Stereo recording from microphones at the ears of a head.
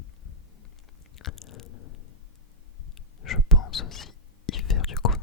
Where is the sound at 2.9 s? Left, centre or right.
Left.